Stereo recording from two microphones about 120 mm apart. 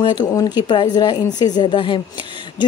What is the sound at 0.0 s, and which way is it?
Speech, 35° left (ahead or behind).